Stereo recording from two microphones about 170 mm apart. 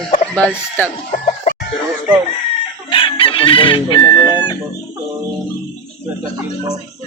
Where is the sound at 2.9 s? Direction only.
30° left (ahead or behind).